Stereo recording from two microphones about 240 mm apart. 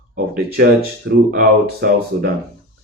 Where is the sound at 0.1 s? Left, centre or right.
Right.